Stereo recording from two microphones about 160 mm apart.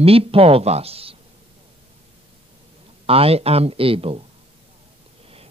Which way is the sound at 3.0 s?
35° right (ahead or behind).